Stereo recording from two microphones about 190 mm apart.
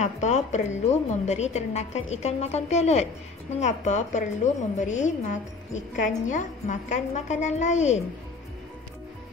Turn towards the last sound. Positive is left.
turn(degrees=40)  # may be behind; listen again after turning